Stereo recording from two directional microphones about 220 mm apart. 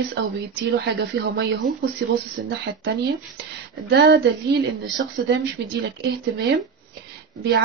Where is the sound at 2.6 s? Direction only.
45° right (ahead or behind).